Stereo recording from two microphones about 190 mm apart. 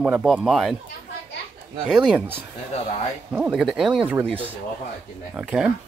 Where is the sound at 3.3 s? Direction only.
10° right (ahead or behind).